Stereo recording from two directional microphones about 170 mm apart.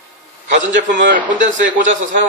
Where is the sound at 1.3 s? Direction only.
45° right (ahead or behind).